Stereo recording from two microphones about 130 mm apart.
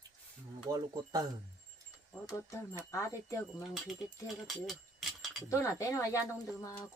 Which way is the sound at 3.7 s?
Centre (ahead or behind).